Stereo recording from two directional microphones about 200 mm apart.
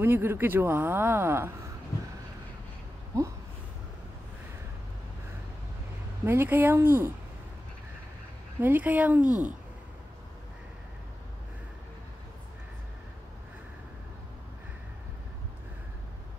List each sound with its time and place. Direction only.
0.0 s speech: 10° right (ahead or behind)
6.2 s speech: 10° right (ahead or behind)
8.5 s speech: 10° right (ahead or behind)
9.3 s speech: 40° right (ahead or behind)